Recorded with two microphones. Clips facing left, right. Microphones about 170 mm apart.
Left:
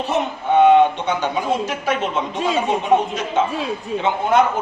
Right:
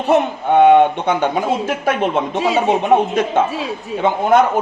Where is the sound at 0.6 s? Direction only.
55° right (ahead or behind).